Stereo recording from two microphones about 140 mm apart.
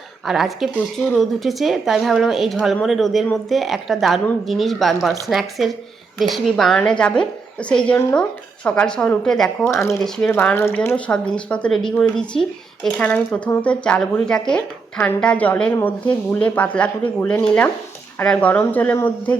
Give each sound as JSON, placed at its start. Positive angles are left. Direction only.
{"t": 0.3, "sound": "a woman's voice", "side_deg": 0}
{"t": 9.6, "sound": "speech", "side_deg": 20}
{"t": 10.0, "sound": "a woman's voice", "side_deg": 5}